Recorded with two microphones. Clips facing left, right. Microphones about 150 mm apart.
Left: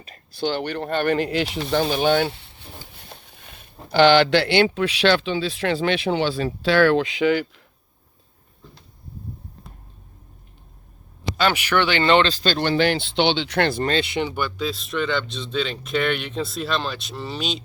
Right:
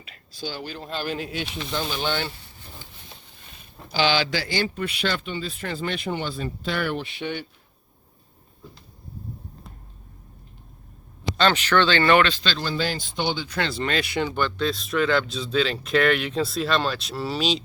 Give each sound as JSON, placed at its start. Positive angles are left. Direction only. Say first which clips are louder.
{"t": 0.3, "sound": "speech", "louder": "left 9 dB", "side_deg": 65}
{"t": 2.0, "sound": "speech", "louder": "left 8 dB", "side_deg": 55}
{"t": 3.1, "sound": "a sound", "louder": "left 4 dB", "side_deg": 55}
{"t": 3.9, "sound": "speech", "louder": "left 8 dB", "side_deg": 60}
{"t": 11.3, "sound": "speech", "louder": "even", "side_deg": 10}
{"t": 12.3, "sound": "speech", "louder": "left 5 dB", "side_deg": 45}
{"t": 12.5, "sound": "speech", "louder": "left 7 dB", "side_deg": 65}
{"t": 13.8, "sound": "speech", "louder": "left 3 dB", "side_deg": 25}
{"t": 14.3, "sound": "speech", "louder": "right 1 dB", "side_deg": 10}